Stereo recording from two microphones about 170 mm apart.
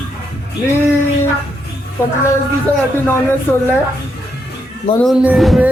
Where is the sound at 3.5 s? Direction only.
10° left (ahead or behind).